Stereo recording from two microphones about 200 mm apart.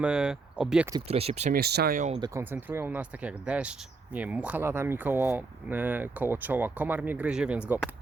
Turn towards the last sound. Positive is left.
turn(degrees=-5)  # may be behind; listen again after turning